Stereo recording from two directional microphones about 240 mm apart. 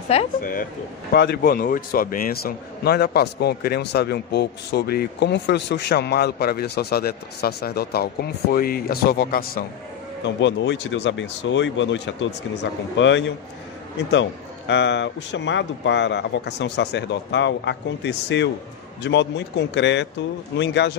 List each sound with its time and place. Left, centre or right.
0.1 s a man's voice: left
1.1 s a man's voice: left
10.2 s speech: left
14.7 s speech: left